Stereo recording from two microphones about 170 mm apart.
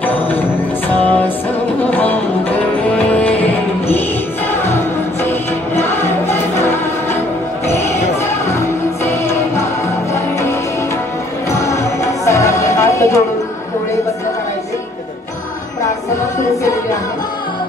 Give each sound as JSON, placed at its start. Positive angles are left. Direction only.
{"t": 0.0, "sound": "music", "side_deg": 10}
{"t": 5.3, "sound": "music", "side_deg": 15}
{"t": 11.5, "sound": "music", "side_deg": 20}